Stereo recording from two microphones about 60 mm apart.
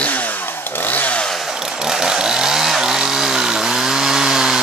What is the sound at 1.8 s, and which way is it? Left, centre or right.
Chainsaw, centre.